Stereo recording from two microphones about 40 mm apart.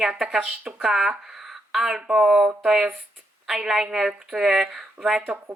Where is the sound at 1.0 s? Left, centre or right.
Centre.